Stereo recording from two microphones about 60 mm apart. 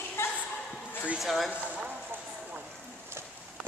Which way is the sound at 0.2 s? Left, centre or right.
Left.